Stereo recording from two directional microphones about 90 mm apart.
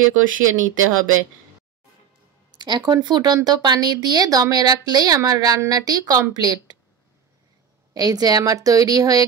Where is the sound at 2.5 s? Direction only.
55° right (ahead or behind).